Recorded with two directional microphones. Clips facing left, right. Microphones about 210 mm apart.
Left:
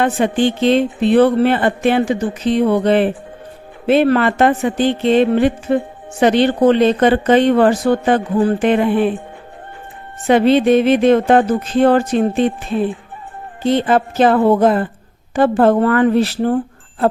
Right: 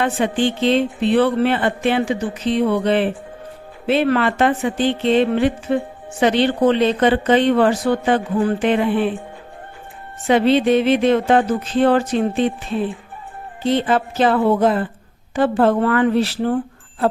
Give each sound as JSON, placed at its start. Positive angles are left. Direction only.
{"t": 0.0, "sound": "speech", "side_deg": 45}
{"t": 10.2, "sound": "speech", "side_deg": 45}
{"t": 13.7, "sound": "speech", "side_deg": 45}